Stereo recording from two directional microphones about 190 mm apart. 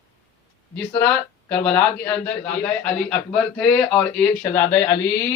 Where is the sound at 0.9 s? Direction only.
10° left (ahead or behind).